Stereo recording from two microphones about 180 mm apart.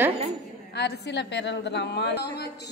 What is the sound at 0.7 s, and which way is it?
A woman's voice, 70° left (ahead or behind).